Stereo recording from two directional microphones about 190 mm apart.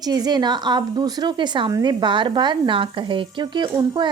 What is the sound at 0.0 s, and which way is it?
A woman's voice, 20° right (ahead or behind).